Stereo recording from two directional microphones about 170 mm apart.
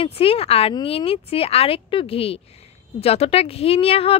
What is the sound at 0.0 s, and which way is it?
Speech, 35° left (ahead or behind).